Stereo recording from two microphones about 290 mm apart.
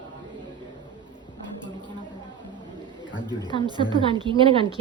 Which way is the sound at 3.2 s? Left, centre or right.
Centre.